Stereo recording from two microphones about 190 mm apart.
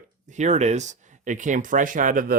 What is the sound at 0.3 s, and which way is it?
Speech, 40° right (ahead or behind).